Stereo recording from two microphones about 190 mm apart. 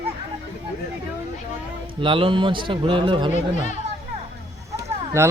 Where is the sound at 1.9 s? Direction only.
25° right (ahead or behind).